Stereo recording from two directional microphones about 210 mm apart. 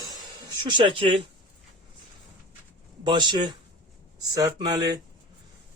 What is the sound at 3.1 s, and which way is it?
A man's voice, 20° right (ahead or behind).